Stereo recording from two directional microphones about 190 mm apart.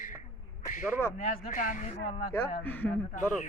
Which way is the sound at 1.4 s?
45° left (ahead or behind).